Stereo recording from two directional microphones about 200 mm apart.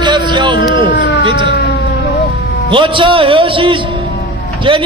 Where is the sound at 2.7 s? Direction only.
25° right (ahead or behind).